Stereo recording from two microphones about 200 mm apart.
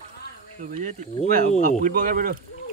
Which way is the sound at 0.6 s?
40° right (ahead or behind).